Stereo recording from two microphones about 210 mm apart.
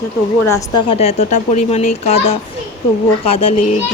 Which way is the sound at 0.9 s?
30° left (ahead or behind).